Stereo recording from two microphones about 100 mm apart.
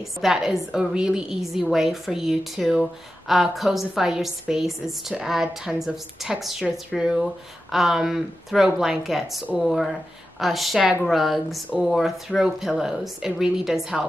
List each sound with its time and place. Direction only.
0.2 s a woman's voice: 5° right (ahead or behind)